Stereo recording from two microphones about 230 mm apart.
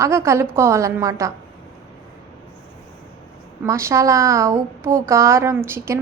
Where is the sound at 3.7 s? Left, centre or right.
Centre.